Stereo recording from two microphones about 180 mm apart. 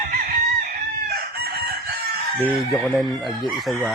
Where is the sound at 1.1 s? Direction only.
60° right (ahead or behind).